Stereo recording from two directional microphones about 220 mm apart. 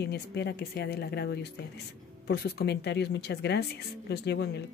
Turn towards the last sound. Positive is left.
turn(degrees=50)  # may be behind; listen again after turning